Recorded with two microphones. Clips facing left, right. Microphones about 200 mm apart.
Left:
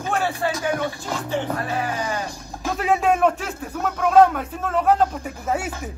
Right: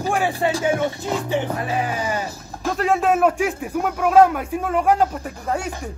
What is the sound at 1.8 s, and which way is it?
Speech, 10° right (ahead or behind).